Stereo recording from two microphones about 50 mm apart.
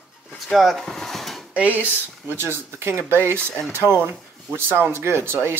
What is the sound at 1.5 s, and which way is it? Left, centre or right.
Speech, right.